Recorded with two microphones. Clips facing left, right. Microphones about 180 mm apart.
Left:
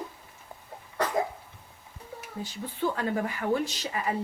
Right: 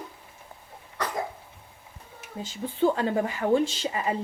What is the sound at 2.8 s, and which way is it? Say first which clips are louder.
A woman's voice: right 5 dB; 25° right (ahead or behind).